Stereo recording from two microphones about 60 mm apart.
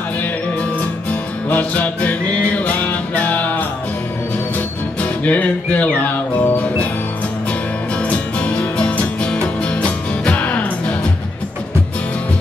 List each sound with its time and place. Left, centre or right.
1.5 s music: left
5.2 s music: left
8.1 s music: left